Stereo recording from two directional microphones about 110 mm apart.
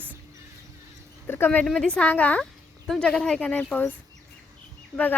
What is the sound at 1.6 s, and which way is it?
Speech, 5° left (ahead or behind).